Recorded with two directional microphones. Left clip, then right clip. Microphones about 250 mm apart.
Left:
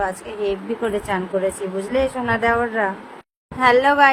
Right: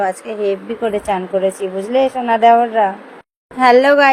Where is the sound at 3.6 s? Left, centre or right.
Centre.